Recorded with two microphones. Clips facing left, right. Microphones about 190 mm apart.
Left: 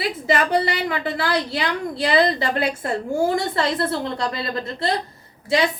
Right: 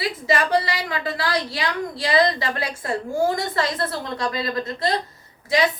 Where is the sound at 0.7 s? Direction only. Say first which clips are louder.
Left 3 dB; 25° left (ahead or behind).